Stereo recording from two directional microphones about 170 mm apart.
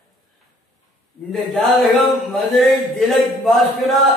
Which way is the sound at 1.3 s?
Centre (ahead or behind).